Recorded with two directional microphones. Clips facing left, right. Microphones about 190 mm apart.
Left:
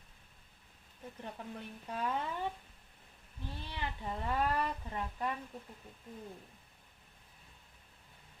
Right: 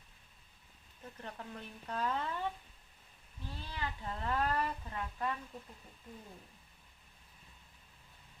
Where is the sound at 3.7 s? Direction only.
15° left (ahead or behind).